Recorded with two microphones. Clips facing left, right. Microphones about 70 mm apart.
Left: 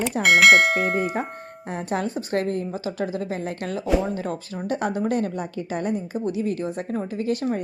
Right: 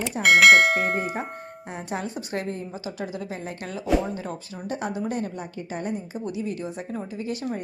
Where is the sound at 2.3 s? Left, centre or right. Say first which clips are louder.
Left 6 dB; left.